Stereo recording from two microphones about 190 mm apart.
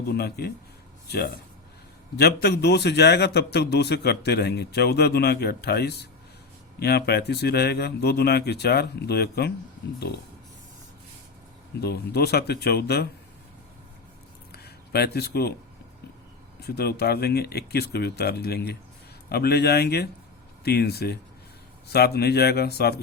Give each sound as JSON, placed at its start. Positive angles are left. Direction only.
{"t": 0.1, "sound": "a man's voice", "side_deg": 55}
{"t": 11.8, "sound": "a man's voice", "side_deg": 55}
{"t": 14.5, "sound": "a sound", "side_deg": 55}
{"t": 16.6, "sound": "a man's voice", "side_deg": 55}